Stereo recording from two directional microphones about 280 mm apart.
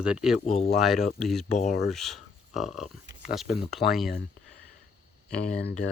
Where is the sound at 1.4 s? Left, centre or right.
Left.